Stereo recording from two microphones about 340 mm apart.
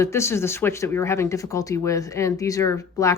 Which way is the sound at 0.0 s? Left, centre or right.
Centre.